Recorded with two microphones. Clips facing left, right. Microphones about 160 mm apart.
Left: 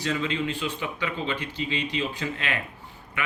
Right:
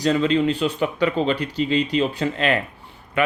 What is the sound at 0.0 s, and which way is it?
Speech, 35° right (ahead or behind).